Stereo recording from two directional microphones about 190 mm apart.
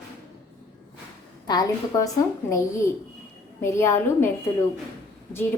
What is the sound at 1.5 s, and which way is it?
A woman's voice, 20° left (ahead or behind).